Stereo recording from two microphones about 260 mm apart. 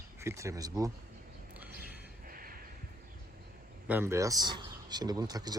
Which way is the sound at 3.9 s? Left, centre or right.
Centre.